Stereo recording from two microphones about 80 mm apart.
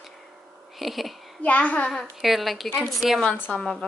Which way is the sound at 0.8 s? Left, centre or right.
Centre.